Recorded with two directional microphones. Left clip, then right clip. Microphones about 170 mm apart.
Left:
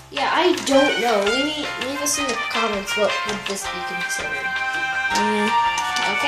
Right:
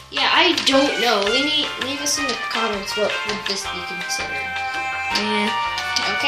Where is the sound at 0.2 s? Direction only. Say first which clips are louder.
Right 3 dB; 25° left (ahead or behind).